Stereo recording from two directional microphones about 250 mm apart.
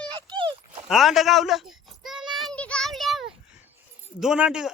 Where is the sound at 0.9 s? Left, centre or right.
Centre.